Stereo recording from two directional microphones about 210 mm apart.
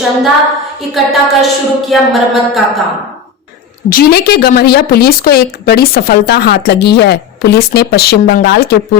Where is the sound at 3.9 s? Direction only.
50° left (ahead or behind).